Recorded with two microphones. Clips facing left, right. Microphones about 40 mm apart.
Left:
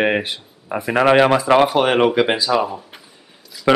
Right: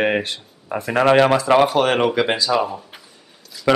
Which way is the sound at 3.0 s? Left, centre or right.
Centre.